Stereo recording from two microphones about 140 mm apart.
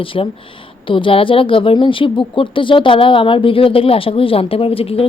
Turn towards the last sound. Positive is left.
turn(degrees=40)  # may be behind; listen again after turning